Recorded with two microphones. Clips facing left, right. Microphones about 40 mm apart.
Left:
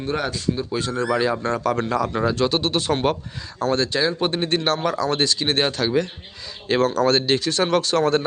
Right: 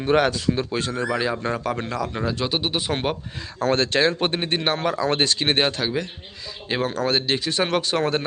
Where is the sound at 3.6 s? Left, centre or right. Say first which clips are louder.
Right 1 dB; right.